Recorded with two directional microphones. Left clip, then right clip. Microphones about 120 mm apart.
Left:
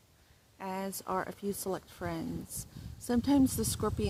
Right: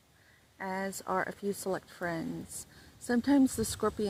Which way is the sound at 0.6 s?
5° left (ahead or behind).